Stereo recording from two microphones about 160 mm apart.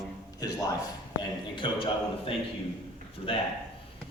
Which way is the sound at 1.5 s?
30° left (ahead or behind).